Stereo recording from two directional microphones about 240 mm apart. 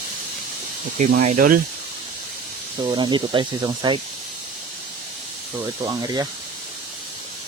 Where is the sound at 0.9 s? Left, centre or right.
Right.